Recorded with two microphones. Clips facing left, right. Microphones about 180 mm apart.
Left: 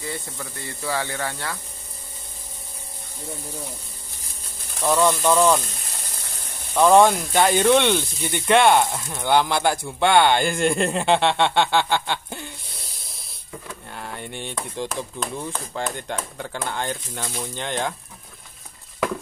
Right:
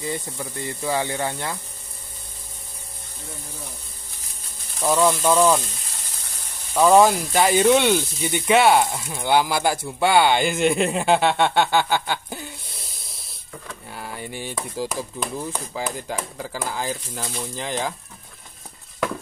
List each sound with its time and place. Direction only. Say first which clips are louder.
0.0 s speech: right 3 dB; 20° right (ahead or behind)
4.8 s speech: even; 5° right (ahead or behind)
6.7 s speech: even; 5° right (ahead or behind)
13.8 s speech: right 2 dB; 5° right (ahead or behind)